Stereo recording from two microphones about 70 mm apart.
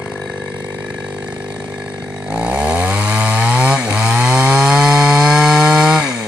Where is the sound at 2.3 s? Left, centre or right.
Centre.